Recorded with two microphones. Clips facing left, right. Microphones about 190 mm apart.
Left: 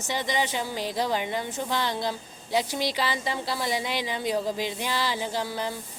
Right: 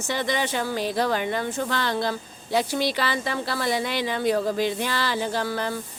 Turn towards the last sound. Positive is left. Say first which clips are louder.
# right 3 dB
turn(degrees=15)  # may be behind; listen again after turning